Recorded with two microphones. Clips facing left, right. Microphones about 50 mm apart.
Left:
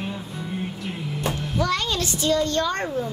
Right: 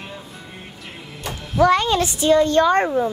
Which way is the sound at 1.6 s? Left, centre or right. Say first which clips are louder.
Right 9 dB; right.